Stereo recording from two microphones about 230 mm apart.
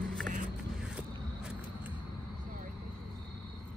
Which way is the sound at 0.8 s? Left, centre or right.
Centre.